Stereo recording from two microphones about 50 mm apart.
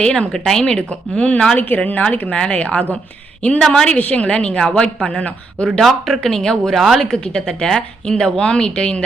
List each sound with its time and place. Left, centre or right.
0.0 s speech: centre
0.9 s a woman's voice: left
1.5 s a woman's voice: left
1.8 s a woman's voice: left
3.6 s a woman's voice: centre
5.8 s speech: centre
7.0 s speech: centre